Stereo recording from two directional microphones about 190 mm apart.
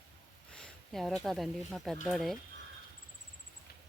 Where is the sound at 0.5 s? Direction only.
Centre (ahead or behind).